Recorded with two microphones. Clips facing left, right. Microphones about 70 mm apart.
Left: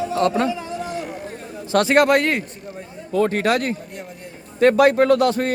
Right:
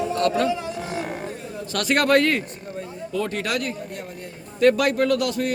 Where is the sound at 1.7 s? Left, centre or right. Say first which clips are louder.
Left 4 dB; left.